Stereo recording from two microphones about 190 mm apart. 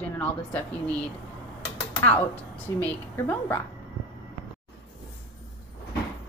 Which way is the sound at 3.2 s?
10° left (ahead or behind).